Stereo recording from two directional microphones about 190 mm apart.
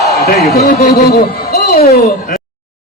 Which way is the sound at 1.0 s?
55° left (ahead or behind).